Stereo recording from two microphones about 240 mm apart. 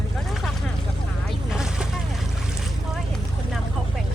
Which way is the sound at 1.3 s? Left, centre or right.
Centre.